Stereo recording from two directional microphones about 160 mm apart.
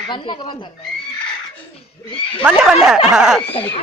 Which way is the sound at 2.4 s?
5° right (ahead or behind).